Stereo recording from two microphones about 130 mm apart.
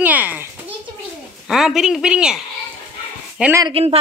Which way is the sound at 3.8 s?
50° right (ahead or behind).